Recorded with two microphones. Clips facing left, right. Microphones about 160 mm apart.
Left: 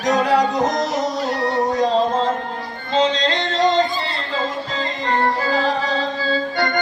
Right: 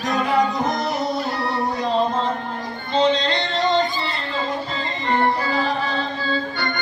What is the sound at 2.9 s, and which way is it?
Music, 90° left.